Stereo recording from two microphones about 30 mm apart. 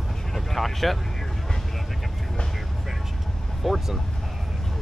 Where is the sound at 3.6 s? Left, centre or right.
Centre.